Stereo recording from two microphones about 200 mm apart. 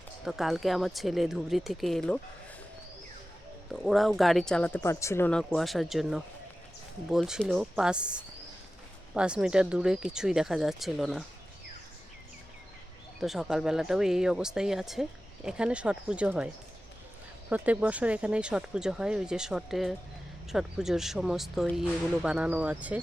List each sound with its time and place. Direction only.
0.3 s speech: centre (ahead or behind)
3.7 s speech: centre (ahead or behind)
9.1 s speech: 5° right (ahead or behind)
13.1 s speech: centre (ahead or behind)
17.5 s speech: 5° right (ahead or behind)